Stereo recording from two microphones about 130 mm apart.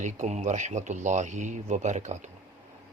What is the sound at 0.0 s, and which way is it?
Speech, 60° right (ahead or behind).